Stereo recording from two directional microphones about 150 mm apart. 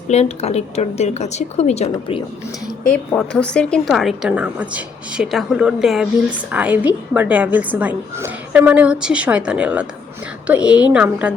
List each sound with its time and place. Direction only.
0.1 s a woman's voice: 45° left (ahead or behind)
2.8 s a woman's voice: 10° left (ahead or behind); by 11.3 s 5° right (ahead or behind)